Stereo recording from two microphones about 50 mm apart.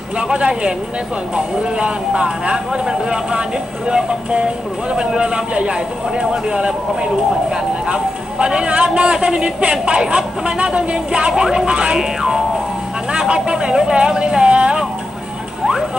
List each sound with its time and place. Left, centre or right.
0.2 s a man's voice: centre